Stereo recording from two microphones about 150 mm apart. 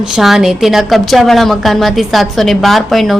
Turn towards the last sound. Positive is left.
turn(degrees=0)  # may be behind; listen again after turning